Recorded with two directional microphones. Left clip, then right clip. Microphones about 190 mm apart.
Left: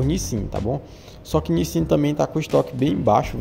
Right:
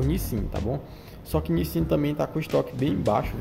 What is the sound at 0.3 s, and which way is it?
Speech, centre (ahead or behind).